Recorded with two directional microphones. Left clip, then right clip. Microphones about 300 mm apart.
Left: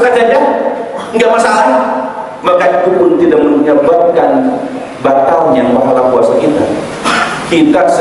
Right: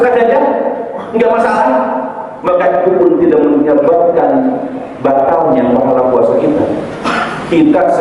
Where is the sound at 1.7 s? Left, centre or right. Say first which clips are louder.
Left 2 dB; centre.